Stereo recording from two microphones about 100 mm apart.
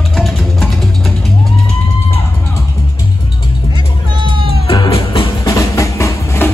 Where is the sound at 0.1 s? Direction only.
Centre (ahead or behind).